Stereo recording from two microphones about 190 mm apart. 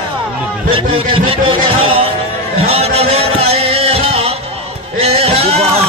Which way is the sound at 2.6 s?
30° right (ahead or behind).